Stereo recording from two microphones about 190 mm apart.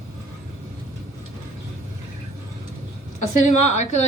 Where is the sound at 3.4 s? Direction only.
35° left (ahead or behind).